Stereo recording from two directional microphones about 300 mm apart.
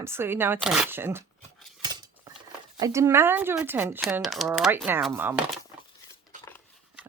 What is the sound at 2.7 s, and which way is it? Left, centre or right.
Speech, centre.